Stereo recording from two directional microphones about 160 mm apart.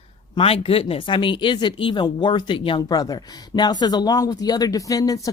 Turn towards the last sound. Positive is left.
turn(degrees=20)  # may be behind; listen again after turning